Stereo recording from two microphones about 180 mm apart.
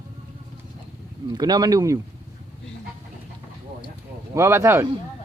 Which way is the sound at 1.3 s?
20° right (ahead or behind).